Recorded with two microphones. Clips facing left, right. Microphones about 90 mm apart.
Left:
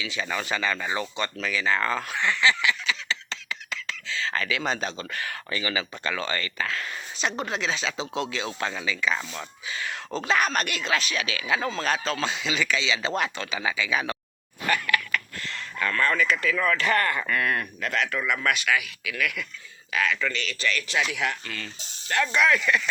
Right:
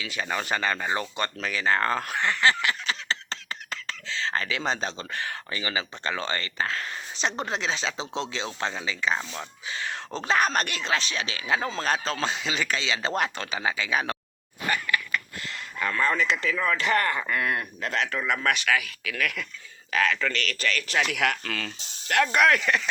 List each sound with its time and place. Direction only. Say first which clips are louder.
0.0 s speech: even; 45° right (ahead or behind)
15.8 s speech: left 1 dB; 20° right (ahead or behind); by 21.1 s 40° right (ahead or behind)
21.1 s speech: right 3 dB; 70° right (ahead or behind)
22.1 s speech: right 2 dB; 60° right (ahead or behind)
22.6 s speech: left 1 dB; 40° right (ahead or behind)